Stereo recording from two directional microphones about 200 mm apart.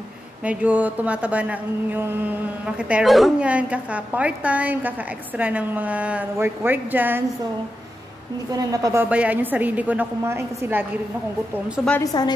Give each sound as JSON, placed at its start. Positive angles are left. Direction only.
{"t": 0.4, "sound": "speech", "side_deg": -5}
{"t": 8.5, "sound": "speech", "side_deg": -15}
{"t": 9.1, "sound": "speech", "side_deg": -5}
{"t": 11.7, "sound": "a woman's voice", "side_deg": 5}
{"t": 12.0, "sound": "a woman's voice", "side_deg": 20}